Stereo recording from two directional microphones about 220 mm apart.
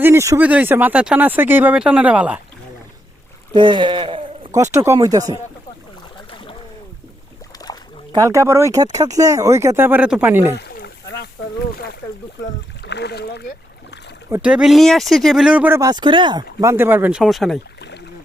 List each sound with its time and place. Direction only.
0.0 s speech: 10° right (ahead or behind)
3.5 s speech: 20° right (ahead or behind)
8.1 s speech: 15° right (ahead or behind)
10.6 s rowboat: 50° left (ahead or behind)
12.8 s speech: 50° left (ahead or behind)
14.3 s speech: 10° right (ahead or behind)
17.7 s rowboat: 50° left (ahead or behind)